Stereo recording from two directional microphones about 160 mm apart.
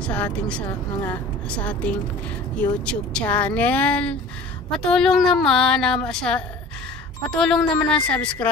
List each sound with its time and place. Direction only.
0.0 s speech: 5° left (ahead or behind)